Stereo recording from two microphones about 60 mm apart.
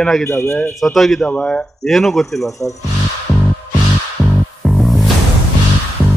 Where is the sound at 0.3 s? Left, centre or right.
Left.